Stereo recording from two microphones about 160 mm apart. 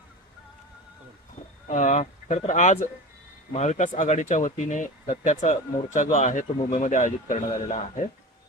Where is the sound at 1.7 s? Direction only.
50° left (ahead or behind).